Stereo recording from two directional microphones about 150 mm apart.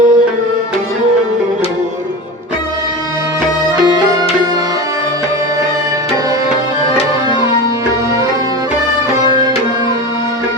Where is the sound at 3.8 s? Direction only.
30° right (ahead or behind).